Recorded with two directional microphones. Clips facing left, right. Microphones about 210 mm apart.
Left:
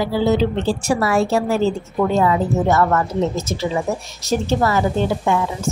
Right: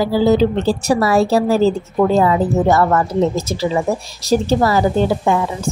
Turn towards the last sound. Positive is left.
turn(degrees=-35)  # may be behind; listen again after turning